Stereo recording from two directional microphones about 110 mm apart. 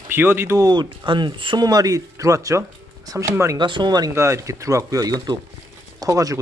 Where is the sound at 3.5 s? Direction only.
45° right (ahead or behind).